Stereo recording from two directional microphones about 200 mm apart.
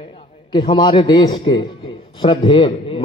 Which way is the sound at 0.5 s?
20° left (ahead or behind).